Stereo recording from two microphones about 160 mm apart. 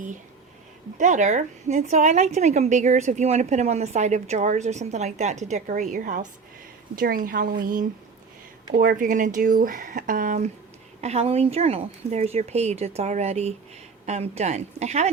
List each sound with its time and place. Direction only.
0.9 s a woman's voice: 50° right (ahead or behind)
11.0 s a woman's voice: 45° right (ahead or behind)